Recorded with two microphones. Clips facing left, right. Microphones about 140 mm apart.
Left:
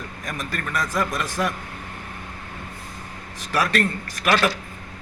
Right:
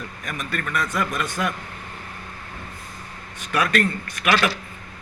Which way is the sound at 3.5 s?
35° left (ahead or behind).